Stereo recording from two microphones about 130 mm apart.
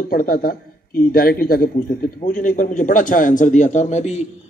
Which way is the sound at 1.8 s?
90° left.